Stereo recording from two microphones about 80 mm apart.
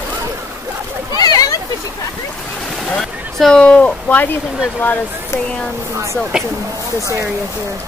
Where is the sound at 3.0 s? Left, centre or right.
Centre.